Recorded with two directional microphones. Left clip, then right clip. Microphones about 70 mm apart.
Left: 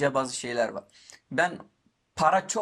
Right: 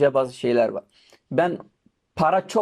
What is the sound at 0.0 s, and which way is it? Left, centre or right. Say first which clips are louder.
Speech: right 7 dB; right.